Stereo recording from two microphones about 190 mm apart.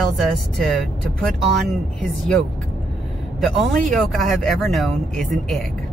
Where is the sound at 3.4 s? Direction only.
Centre (ahead or behind).